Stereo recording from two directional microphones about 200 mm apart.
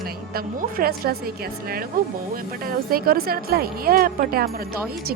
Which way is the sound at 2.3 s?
45° right (ahead or behind).